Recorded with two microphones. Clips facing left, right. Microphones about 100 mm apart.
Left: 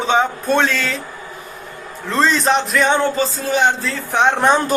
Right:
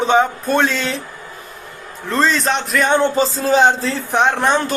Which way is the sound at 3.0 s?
30° right (ahead or behind).